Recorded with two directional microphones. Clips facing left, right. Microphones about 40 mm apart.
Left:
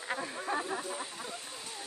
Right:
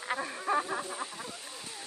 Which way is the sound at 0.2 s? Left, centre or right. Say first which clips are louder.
Right 4 dB; centre.